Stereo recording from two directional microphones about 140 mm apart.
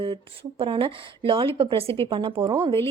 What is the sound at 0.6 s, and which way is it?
Speech, 40° right (ahead or behind).